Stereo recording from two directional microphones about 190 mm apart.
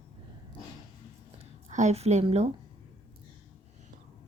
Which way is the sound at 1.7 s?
40° right (ahead or behind).